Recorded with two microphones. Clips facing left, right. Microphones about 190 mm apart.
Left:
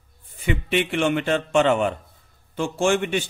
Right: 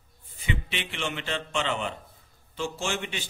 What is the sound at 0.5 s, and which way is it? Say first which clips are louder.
A man's voice: left 10 dB; 50° left (ahead or behind).